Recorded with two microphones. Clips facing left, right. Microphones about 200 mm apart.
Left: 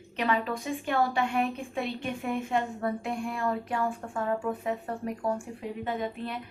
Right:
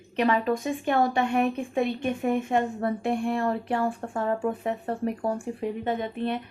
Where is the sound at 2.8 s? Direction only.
30° right (ahead or behind).